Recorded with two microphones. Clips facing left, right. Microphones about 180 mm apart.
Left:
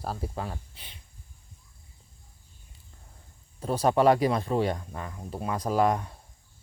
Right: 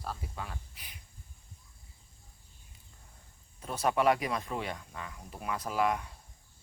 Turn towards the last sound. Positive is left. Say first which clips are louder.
# left 6 dB
turn(degrees=35)  # may be behind; listen again after turning